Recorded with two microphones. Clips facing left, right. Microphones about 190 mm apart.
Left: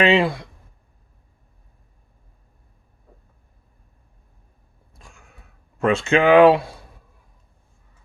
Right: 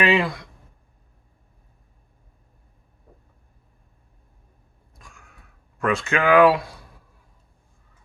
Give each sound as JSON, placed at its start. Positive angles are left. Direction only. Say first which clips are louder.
{"t": 0.0, "sound": "speech", "louder": "left 3 dB", "side_deg": 25}
{"t": 4.9, "sound": "a sound", "louder": "left 1 dB", "side_deg": 25}
{"t": 5.8, "sound": "speech", "louder": "left 5 dB", "side_deg": 25}